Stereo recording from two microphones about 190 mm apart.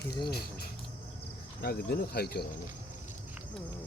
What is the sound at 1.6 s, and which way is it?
Speech, 55° left (ahead or behind).